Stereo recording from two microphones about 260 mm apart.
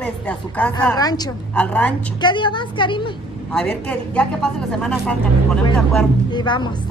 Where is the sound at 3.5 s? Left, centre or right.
Centre.